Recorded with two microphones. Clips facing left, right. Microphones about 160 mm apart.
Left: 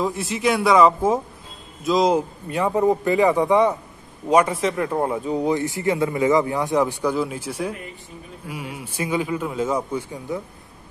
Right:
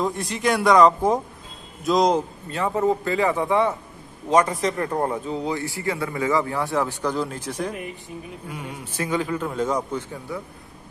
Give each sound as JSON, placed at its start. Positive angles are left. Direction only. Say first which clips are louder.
{"t": 0.0, "sound": "a man's voice", "louder": "left 2 dB", "side_deg": 5}
{"t": 10.3, "sound": "speech", "louder": "left 4 dB", "side_deg": 20}